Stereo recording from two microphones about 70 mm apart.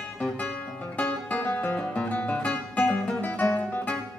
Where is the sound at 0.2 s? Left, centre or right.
Left.